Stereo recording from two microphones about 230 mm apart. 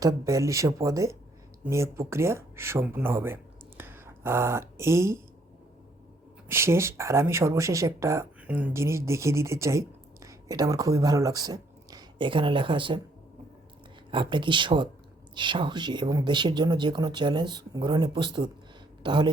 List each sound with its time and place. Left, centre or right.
0.0 s speech: centre
3.8 s a sound: centre
6.5 s speech: centre
14.1 s speech: right